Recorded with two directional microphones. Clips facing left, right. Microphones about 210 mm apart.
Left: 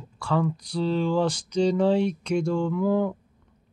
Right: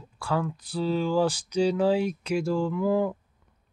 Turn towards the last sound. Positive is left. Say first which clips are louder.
# left 1 dB
turn(degrees=-5)  # may be behind; listen again after turning